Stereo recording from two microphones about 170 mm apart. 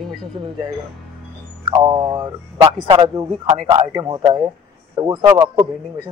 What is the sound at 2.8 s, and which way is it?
A man's voice, 30° right (ahead or behind).